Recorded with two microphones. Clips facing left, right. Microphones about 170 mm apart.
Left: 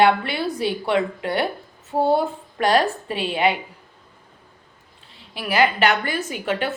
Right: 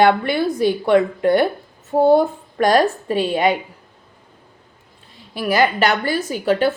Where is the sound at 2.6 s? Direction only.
45° right (ahead or behind).